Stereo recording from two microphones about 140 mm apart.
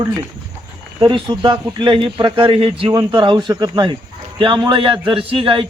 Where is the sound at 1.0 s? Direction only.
30° right (ahead or behind).